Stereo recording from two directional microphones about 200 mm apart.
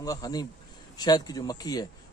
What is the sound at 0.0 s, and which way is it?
Speech, 20° left (ahead or behind).